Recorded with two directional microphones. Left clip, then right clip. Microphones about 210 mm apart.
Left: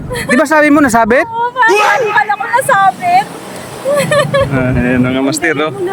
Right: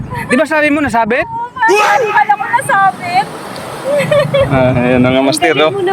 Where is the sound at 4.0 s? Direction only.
20° left (ahead or behind).